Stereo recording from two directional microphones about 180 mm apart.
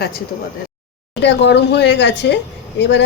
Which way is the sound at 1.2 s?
75° left (ahead or behind).